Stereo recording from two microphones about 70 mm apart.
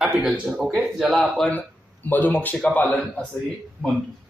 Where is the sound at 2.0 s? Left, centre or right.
Left.